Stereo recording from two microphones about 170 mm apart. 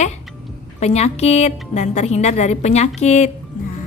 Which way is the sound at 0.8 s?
40° left (ahead or behind).